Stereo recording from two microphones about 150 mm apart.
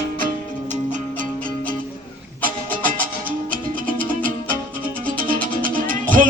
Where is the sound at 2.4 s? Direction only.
65° right (ahead or behind).